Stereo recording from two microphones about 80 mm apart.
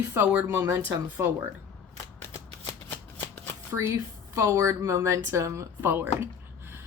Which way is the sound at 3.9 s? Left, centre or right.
Right.